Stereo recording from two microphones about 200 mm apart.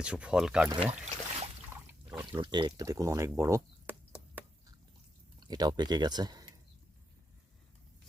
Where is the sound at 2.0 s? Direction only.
5° right (ahead or behind).